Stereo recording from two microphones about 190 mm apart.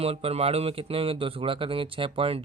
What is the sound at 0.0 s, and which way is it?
Speech, 30° right (ahead or behind).